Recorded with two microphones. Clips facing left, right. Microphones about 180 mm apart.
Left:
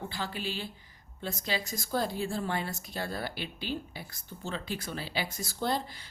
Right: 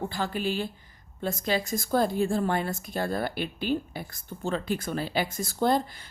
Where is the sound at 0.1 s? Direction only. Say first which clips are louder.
Right 7 dB; 50° right (ahead or behind).